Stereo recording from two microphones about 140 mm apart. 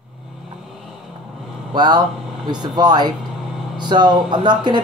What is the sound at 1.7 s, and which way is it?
Speech, 30° right (ahead or behind).